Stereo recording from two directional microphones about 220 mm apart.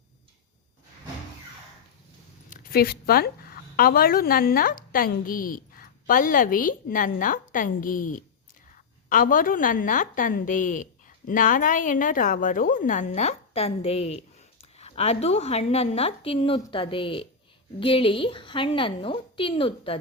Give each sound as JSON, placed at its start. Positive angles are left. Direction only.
{"t": 2.5, "sound": "a woman's voice", "side_deg": 40}